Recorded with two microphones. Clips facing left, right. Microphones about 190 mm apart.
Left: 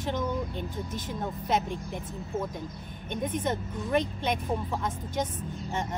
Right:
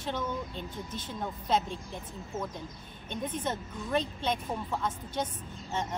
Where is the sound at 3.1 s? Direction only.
15° left (ahead or behind).